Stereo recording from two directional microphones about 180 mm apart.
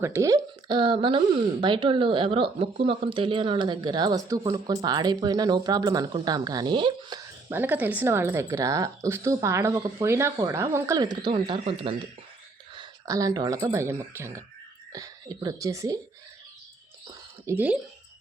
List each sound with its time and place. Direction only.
0.0 s a woman's voice: 15° right (ahead or behind)
0.7 s speech: 30° right (ahead or behind)
7.5 s a woman's voice: 10° right (ahead or behind)
17.4 s speech: 10° right (ahead or behind)